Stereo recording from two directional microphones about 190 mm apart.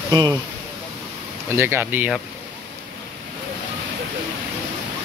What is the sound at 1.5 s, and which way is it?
Speech, 10° right (ahead or behind).